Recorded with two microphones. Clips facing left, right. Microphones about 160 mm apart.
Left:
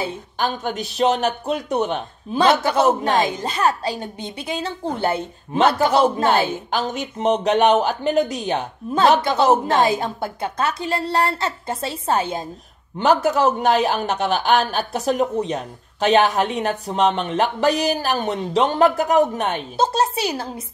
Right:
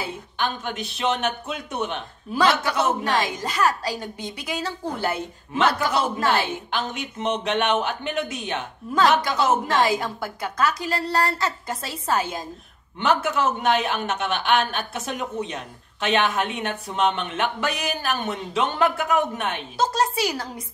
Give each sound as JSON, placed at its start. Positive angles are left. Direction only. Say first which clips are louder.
{"t": 0.0, "sound": "a man's voice", "louder": "left 4 dB", "side_deg": 40}
{"t": 13.0, "sound": "a man's voice", "louder": "left 5 dB", "side_deg": 40}